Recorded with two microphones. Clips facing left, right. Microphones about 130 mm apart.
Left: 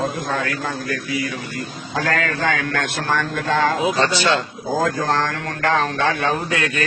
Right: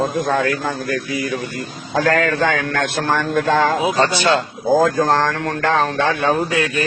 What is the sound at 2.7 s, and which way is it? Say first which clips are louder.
A man's voice: right 3 dB; 45° right (ahead or behind).